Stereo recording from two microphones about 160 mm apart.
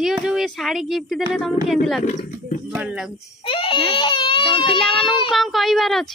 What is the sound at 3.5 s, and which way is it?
Speech, 35° left (ahead or behind).